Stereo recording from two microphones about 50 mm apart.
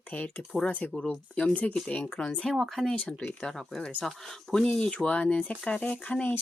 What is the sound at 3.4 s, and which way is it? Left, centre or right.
Speech, centre.